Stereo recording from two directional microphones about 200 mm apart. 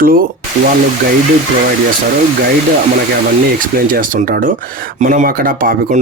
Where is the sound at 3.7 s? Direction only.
45° right (ahead or behind).